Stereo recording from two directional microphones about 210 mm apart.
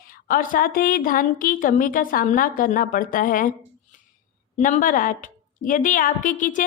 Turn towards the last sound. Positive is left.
turn(degrees=40)  # may be behind; listen again after turning